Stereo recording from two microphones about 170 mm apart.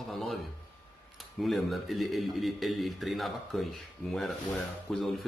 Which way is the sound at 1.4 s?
Centre (ahead or behind).